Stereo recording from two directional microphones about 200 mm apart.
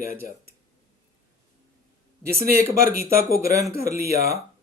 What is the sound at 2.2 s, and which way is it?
Speech, 50° right (ahead or behind).